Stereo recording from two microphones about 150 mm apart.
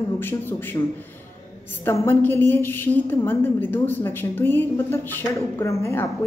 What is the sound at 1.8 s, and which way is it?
A woman's voice, 15° left (ahead or behind).